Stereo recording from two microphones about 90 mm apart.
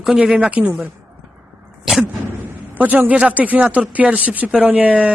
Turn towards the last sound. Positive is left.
turn(degrees=-15)  # may be behind; listen again after turning